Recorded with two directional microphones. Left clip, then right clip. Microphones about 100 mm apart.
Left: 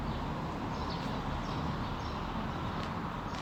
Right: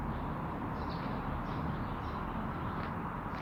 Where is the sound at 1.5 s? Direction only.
20° left (ahead or behind).